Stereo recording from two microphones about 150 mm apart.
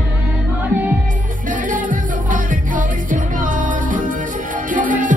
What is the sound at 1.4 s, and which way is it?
Music, 60° right (ahead or behind).